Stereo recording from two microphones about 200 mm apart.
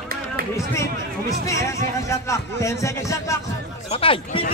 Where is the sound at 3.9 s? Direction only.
25° left (ahead or behind).